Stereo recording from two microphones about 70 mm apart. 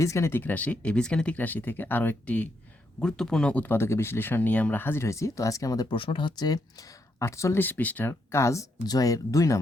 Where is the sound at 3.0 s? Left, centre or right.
Centre.